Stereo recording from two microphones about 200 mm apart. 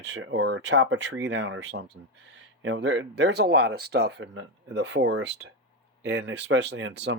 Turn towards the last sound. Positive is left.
turn(degrees=-60)  # may be behind; listen again after turning